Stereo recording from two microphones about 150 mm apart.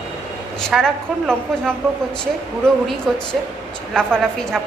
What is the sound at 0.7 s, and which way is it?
A woman's voice, 5° left (ahead or behind).